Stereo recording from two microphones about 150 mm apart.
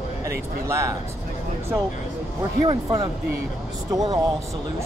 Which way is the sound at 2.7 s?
25° right (ahead or behind).